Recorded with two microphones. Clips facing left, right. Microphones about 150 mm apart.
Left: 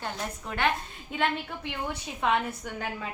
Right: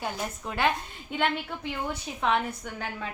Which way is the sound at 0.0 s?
5° right (ahead or behind).